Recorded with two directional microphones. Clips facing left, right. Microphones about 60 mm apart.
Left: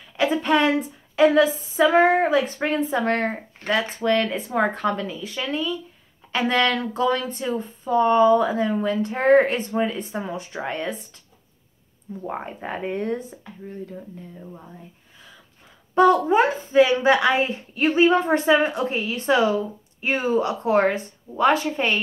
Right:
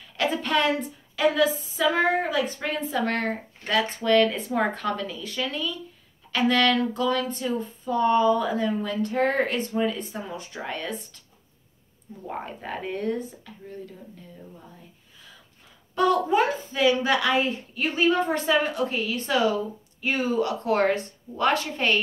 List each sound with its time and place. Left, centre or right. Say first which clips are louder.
0.2 s a sound: left 4 dB; centre
1.3 s a woman's voice: left 5 dB; left
12.3 s a woman's voice: left 3 dB; left
15.9 s a woman's voice: left 5 dB; left
20.6 s a woman's voice: left 2 dB; centre